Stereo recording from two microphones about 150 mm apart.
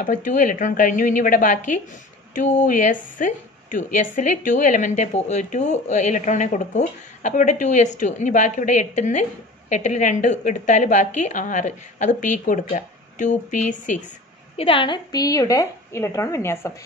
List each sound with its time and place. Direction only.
0.0 s a woman's voice: 60° left (ahead or behind)
14.6 s speech: 35° left (ahead or behind); by 16.7 s 20° left (ahead or behind)